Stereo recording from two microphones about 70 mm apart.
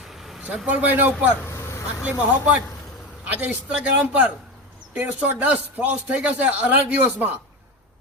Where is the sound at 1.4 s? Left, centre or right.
Left.